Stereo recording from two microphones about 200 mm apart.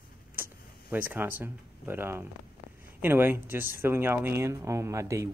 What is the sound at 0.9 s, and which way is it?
Speech, 10° right (ahead or behind).